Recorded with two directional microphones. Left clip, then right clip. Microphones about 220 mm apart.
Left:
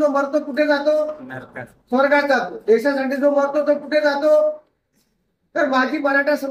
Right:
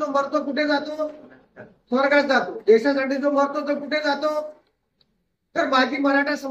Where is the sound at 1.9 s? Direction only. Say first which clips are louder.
Left 2 dB; 45° right (ahead or behind).